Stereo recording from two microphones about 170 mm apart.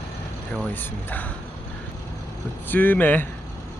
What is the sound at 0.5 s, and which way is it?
Speech, 10° left (ahead or behind).